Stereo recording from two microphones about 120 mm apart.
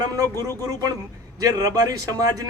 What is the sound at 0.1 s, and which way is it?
A man's voice, 30° right (ahead or behind).